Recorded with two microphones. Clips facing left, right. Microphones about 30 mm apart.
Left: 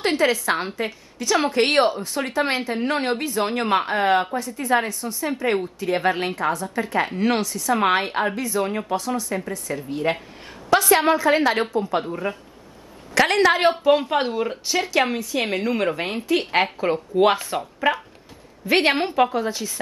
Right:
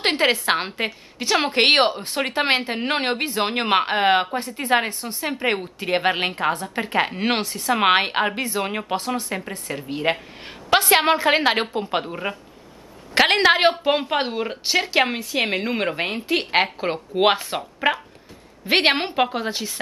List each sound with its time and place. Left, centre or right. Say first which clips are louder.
0.0 s a woman's voice: even; right
12.0 s a woman's voice: left 1 dB; right
13.1 s a woman's voice: right 1 dB; right
14.6 s a woman's voice: right 3 dB; right
16.8 s speech: left 1 dB; right
17.6 s speech: even; right
18.7 s a woman's voice: even; right